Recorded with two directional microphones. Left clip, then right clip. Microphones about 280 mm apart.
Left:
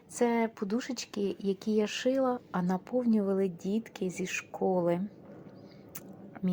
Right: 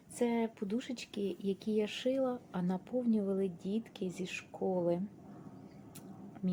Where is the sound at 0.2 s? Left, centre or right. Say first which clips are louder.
Left 6 dB; centre.